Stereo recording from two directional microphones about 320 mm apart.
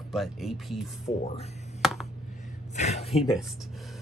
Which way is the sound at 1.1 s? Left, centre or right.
Centre.